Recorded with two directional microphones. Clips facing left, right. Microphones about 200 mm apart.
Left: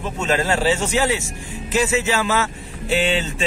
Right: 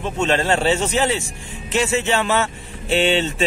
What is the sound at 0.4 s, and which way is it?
Speech, 25° right (ahead or behind).